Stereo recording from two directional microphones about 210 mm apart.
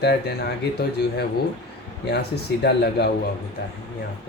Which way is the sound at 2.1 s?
50° left (ahead or behind).